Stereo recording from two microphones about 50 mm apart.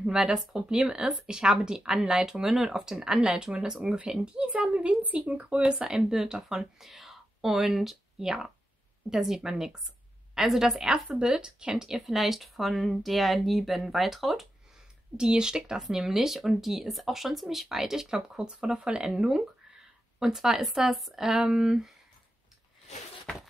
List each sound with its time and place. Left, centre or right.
0.0 s speech: centre
15.1 s speech: centre